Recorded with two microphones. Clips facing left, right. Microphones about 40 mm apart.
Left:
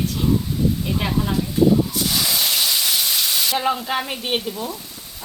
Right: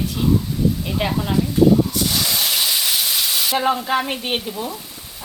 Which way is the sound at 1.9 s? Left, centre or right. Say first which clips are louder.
Right 1 dB; centre.